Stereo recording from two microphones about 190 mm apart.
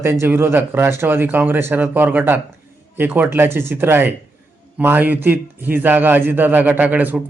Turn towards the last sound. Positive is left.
turn(degrees=-10)  # may be behind; listen again after turning